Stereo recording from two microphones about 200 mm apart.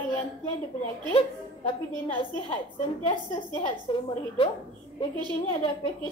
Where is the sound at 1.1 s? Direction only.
25° left (ahead or behind).